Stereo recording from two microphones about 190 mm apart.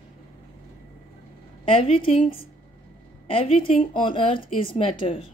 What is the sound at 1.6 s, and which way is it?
A woman's voice, 30° left (ahead or behind).